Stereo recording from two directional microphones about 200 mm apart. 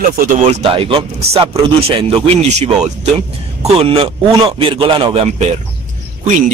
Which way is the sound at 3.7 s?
25° right (ahead or behind).